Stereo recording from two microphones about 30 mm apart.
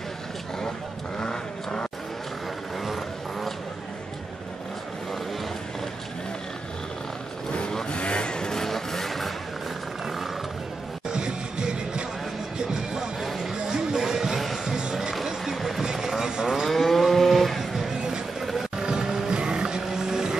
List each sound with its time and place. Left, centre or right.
1.1 s vehicle: left
2.8 s a sound: centre
7.9 s vehicle: left; by 9.3 s centre
11.1 s music: right
14.0 s music: centre
15.5 s vehicle: centre
15.8 s vehicle: centre
16.6 s vehicle: centre
18.4 s music: centre
18.8 s music: right
19.3 s vehicle: right